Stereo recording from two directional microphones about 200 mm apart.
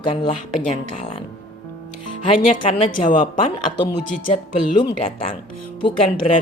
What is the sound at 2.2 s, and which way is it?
A woman's voice, 30° left (ahead or behind).